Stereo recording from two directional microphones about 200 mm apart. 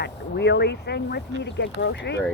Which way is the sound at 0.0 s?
60° left (ahead or behind).